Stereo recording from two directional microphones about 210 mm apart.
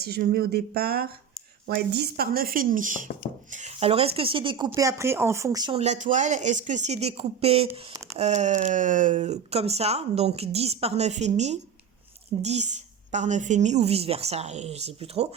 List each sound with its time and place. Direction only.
0.0 s speech: 45° right (ahead or behind); by 5.8 s 20° right (ahead or behind)
5.8 s speech: 35° right (ahead or behind)